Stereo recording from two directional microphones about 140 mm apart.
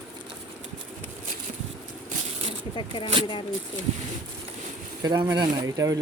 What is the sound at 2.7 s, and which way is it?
Speech, 35° left (ahead or behind).